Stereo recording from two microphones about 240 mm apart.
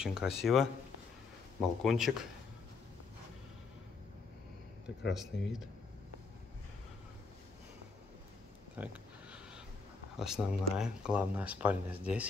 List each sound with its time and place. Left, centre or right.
0.0 s speech: centre
1.8 s speech: centre
5.1 s speech: centre
8.7 s a sound: centre
10.1 s speech: centre